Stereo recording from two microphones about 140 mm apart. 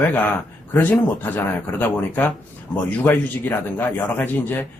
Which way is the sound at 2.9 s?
15° left (ahead or behind).